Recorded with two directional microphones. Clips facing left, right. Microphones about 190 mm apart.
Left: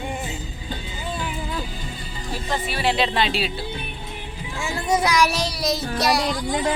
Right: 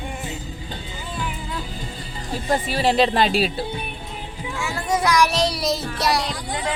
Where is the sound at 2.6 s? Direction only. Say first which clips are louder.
Right 3 dB; 40° right (ahead or behind).